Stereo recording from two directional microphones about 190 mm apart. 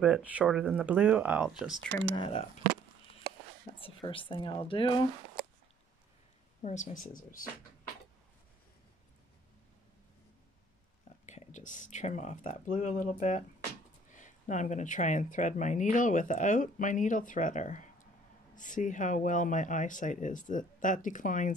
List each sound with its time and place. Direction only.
0.0 s speech: 5° right (ahead or behind)
2.1 s a woman's voice: 25° left (ahead or behind)
2.6 s a sound: 50° right (ahead or behind)
3.8 s a woman's voice: 25° left (ahead or behind)
6.6 s speech: 40° left (ahead or behind)
11.2 s speech: 40° left (ahead or behind)